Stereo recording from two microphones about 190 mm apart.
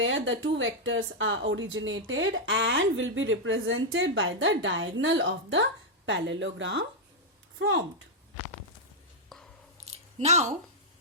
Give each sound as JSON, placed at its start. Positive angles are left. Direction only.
{"t": 0.0, "sound": "a woman's voice", "side_deg": -90}
{"t": 7.6, "sound": "speech", "side_deg": -90}
{"t": 9.3, "sound": "chewing", "side_deg": 0}
{"t": 9.8, "sound": "squish", "side_deg": -35}